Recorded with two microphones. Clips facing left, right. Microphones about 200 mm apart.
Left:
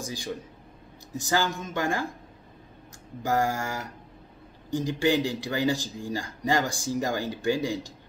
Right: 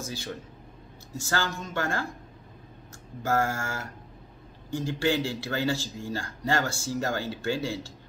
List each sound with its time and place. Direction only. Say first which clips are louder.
0.0 s speech: left 2 dB; 15° left (ahead or behind)
3.2 s speech: left 1 dB; 15° left (ahead or behind)